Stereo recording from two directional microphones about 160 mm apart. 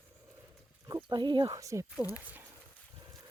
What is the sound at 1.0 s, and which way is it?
Speech, 30° right (ahead or behind).